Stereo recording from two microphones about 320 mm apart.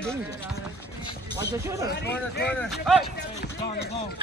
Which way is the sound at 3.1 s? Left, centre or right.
Left.